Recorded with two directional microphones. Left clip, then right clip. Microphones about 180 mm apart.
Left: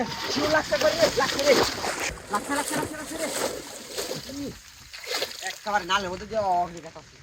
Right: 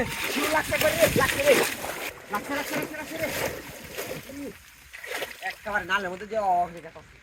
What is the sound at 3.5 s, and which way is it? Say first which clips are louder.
Splash: left 1 dB; 15° left (ahead or behind).